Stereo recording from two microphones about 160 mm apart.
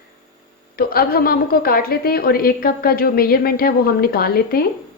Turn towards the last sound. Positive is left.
turn(degrees=70)  # may be behind; listen again after turning